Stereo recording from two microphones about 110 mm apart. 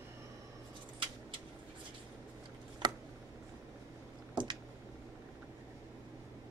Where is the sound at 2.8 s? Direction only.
40° right (ahead or behind).